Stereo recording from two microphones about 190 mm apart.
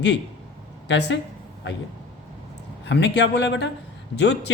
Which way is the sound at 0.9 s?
65° left (ahead or behind).